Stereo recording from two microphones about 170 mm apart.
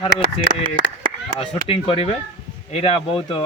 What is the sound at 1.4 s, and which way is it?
Speech, 35° left (ahead or behind).